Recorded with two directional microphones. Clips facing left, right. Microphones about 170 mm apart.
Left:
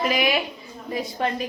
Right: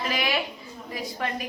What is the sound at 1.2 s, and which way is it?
Speech, 25° left (ahead or behind).